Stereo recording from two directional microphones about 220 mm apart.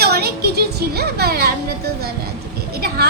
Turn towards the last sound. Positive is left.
turn(degrees=-45)  # may be behind; listen again after turning